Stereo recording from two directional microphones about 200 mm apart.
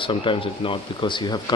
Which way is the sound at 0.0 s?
25° left (ahead or behind).